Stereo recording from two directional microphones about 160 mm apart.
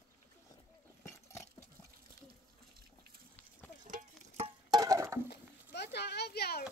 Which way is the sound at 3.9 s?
50° right (ahead or behind).